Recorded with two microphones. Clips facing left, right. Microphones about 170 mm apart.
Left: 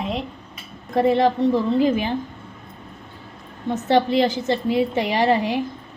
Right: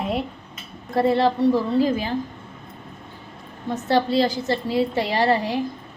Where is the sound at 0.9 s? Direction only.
15° left (ahead or behind).